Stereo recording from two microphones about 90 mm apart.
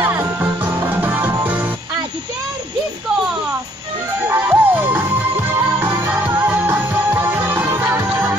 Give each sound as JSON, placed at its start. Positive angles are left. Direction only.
{"t": 0.0, "sound": "music", "side_deg": -25}
{"t": 4.3, "sound": "music", "side_deg": -25}